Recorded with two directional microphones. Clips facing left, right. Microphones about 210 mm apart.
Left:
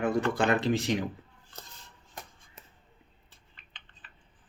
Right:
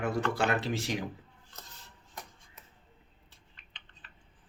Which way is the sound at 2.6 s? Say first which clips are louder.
Left 4 dB; 30° left (ahead or behind).